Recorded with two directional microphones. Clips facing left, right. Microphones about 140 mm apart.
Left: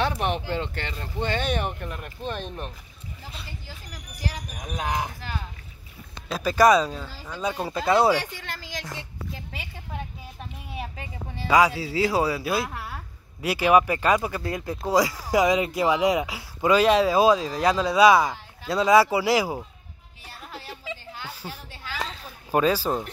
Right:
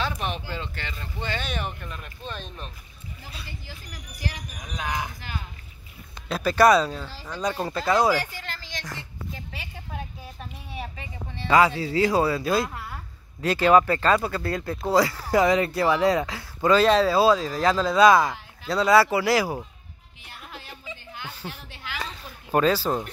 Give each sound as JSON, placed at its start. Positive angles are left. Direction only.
{"t": 0.2, "sound": "speech", "side_deg": 20}
{"t": 0.6, "sound": "speech", "side_deg": 55}
{"t": 2.0, "sound": "speech", "side_deg": 15}
{"t": 4.7, "sound": "speech", "side_deg": 40}
{"t": 6.3, "sound": "speech", "side_deg": 10}
{"t": 7.8, "sound": "speech", "side_deg": 25}
{"t": 10.7, "sound": "speech", "side_deg": 5}
{"t": 21.4, "sound": "speech", "side_deg": 10}